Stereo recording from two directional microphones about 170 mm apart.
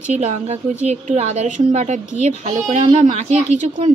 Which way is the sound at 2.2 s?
40° right (ahead or behind).